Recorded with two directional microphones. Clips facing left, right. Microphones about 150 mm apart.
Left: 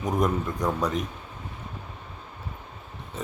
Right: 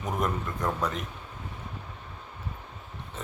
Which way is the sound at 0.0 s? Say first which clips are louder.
Left 5 dB; 15° left (ahead or behind).